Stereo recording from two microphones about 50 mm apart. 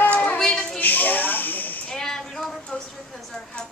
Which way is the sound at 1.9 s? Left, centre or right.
Centre.